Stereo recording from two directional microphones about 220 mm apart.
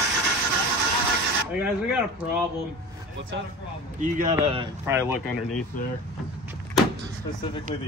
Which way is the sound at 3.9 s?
35° right (ahead or behind).